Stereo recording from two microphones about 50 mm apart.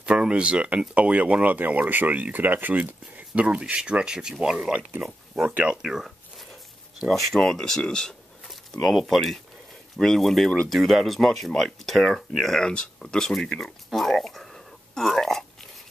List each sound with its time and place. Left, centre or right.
0.0 s speech: right
3.3 s speech: right
5.5 s speech: right
5.8 s speech: centre
7.3 s speech: centre
8.9 s speech: centre
12.7 s speech: centre
13.8 s a sound: centre